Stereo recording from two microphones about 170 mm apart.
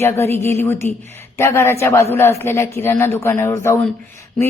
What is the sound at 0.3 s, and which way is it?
Speech, 40° right (ahead or behind).